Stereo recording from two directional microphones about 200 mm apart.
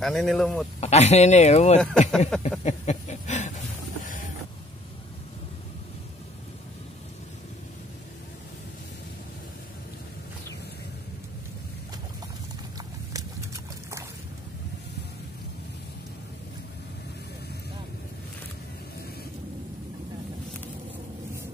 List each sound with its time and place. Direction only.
0.0 s speech: centre (ahead or behind)
0.7 s speech: 35° left (ahead or behind)
2.0 s speech: 5° left (ahead or behind)
2.6 s a sound: 35° left (ahead or behind)
13.1 s horse: 15° right (ahead or behind)